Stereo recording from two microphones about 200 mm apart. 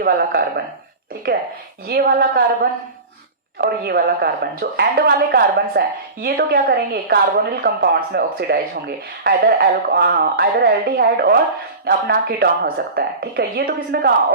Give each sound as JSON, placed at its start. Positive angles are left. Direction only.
{"t": 0.0, "sound": "a woman's voice", "side_deg": -50}
{"t": 1.9, "sound": "a woman's voice", "side_deg": -45}